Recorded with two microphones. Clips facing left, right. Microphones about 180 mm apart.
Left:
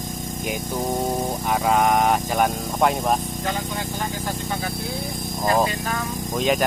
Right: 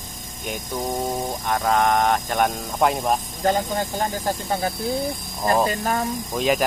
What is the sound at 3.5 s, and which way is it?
Speech, 40° right (ahead or behind).